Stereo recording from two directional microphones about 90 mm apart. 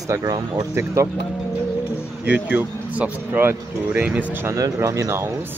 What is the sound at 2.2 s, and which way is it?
Speech, 20° right (ahead or behind).